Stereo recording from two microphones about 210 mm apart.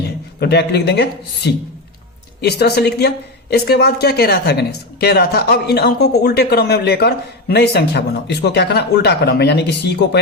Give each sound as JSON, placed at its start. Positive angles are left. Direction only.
{"t": 0.3, "sound": "speech", "side_deg": 50}